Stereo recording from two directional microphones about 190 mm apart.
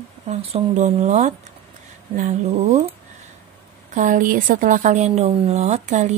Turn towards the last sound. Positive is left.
turn(degrees=-35)  # may be behind; listen again after turning